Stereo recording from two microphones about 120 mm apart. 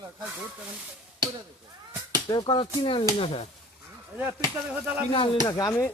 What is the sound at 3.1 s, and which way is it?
Speech, 55° left (ahead or behind).